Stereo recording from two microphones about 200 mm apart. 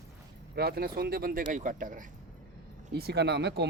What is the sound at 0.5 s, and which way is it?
Speech, 50° right (ahead or behind).